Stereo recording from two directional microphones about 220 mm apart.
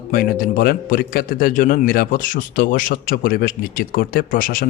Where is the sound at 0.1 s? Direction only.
40° left (ahead or behind).